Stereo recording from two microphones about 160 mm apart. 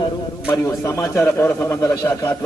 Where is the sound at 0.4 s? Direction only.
15° left (ahead or behind).